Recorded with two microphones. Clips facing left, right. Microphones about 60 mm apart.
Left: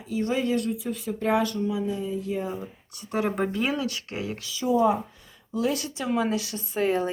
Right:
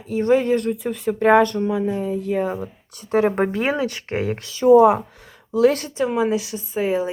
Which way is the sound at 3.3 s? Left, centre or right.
Right.